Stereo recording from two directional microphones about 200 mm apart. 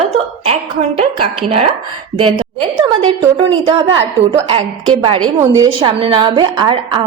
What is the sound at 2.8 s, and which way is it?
Speech, 25° right (ahead or behind).